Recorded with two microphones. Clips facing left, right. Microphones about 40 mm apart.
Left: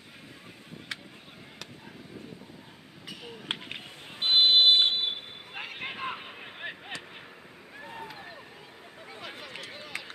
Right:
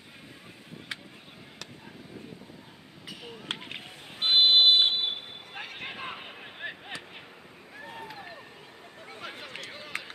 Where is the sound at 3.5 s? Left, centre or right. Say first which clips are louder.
Even; centre.